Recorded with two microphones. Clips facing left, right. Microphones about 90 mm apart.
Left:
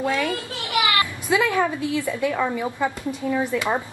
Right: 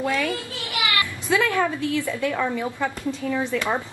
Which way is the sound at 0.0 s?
20° left (ahead or behind).